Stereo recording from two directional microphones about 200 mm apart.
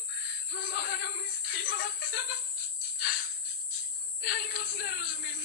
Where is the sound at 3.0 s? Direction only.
45° left (ahead or behind).